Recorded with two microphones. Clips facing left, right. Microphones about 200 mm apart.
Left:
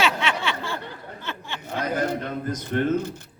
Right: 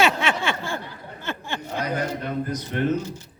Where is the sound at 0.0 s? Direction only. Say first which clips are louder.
Right 3 dB; 45° right (ahead or behind).